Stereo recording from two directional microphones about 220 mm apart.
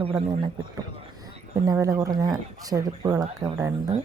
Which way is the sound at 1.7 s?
15° right (ahead or behind).